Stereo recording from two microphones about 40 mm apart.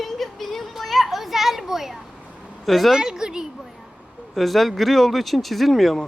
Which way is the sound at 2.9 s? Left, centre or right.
Centre.